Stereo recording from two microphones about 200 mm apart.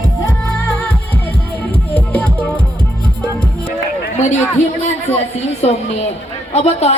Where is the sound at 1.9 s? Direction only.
5° left (ahead or behind).